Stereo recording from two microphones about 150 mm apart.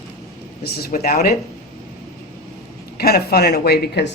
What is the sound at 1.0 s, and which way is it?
Speech, 80° left.